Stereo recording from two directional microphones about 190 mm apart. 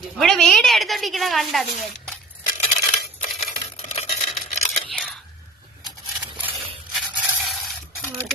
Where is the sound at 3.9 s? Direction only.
35° left (ahead or behind).